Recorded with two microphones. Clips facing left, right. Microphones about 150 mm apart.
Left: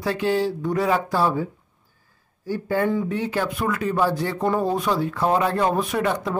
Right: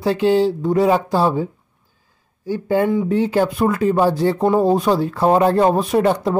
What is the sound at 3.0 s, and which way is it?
Speech, 30° right (ahead or behind).